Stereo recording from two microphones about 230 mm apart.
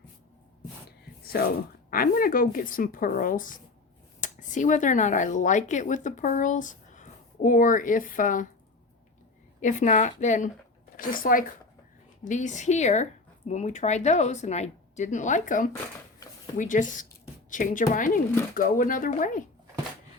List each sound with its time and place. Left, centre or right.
0.9 s a sound: left
1.9 s speech: left
9.6 s speech: left